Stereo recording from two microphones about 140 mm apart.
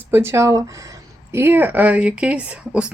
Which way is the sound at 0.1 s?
15° right (ahead or behind).